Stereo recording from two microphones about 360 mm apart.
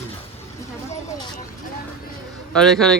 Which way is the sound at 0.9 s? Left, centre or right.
Centre.